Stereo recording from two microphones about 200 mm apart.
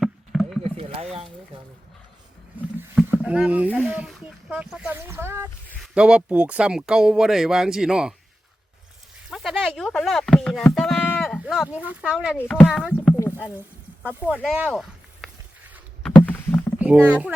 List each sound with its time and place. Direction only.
0.0 s chop: centre (ahead or behind)
0.6 s rowboat: 30° right (ahead or behind)
3.2 s speech: 5° right (ahead or behind)
9.3 s speech: centre (ahead or behind)
12.4 s speech: 10° left (ahead or behind)
12.6 s speech: centre (ahead or behind)
13.1 s a sound: 10° left (ahead or behind)
14.0 s speech: 10° right (ahead or behind)
16.2 s rowboat: 10° left (ahead or behind)
17.1 s speech: 5° right (ahead or behind)